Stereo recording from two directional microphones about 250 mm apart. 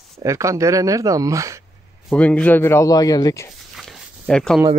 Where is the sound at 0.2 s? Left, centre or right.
Centre.